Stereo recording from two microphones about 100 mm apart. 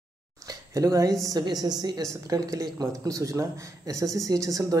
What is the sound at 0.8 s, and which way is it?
A man's voice, 35° right (ahead or behind).